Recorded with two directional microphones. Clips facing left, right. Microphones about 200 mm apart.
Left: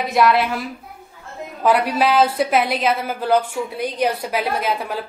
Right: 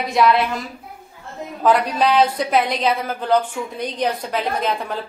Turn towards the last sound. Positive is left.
turn(degrees=5)  # may be behind; listen again after turning